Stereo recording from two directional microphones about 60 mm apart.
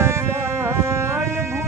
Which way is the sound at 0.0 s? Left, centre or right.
Right.